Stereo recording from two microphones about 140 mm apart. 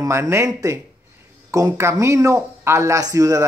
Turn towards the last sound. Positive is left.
turn(degrees=-25)  # may be behind; listen again after turning